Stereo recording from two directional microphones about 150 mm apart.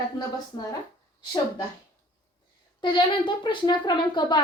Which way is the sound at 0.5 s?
30° left (ahead or behind).